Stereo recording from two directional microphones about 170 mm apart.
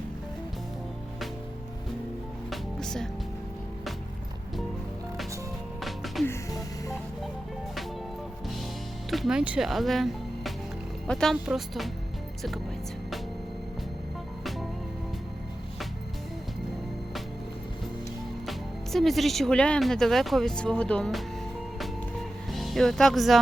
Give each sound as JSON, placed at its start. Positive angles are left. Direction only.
{"t": 2.5, "sound": "music", "side_deg": 5}
{"t": 5.8, "sound": "music", "side_deg": 0}
{"t": 6.2, "sound": "music", "side_deg": 15}
{"t": 9.0, "sound": "speech", "side_deg": 0}
{"t": 18.4, "sound": "speech", "side_deg": 0}
{"t": 22.4, "sound": "speech", "side_deg": 0}